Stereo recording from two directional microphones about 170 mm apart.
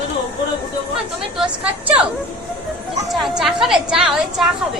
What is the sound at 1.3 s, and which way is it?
Mantra, 5° right (ahead or behind).